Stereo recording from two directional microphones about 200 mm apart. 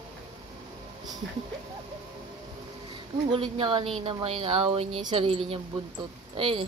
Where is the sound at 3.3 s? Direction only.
25° right (ahead or behind).